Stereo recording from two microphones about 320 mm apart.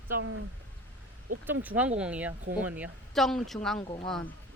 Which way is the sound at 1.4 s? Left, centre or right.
Centre.